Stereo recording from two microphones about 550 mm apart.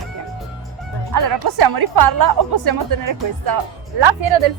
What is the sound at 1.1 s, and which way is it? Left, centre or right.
A woman's voice, right.